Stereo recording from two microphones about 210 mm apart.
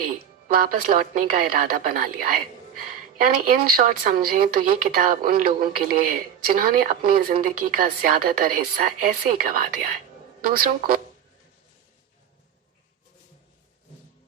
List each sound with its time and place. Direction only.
0.4 s a woman's voice: 45° right (ahead or behind)